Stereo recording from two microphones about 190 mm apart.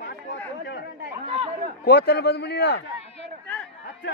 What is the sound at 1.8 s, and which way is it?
A man's voice, 55° left (ahead or behind).